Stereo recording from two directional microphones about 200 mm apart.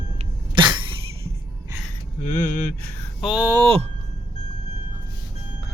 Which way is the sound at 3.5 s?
30° right (ahead or behind).